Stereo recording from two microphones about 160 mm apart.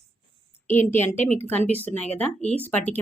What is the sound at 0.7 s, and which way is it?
Speech, 15° left (ahead or behind).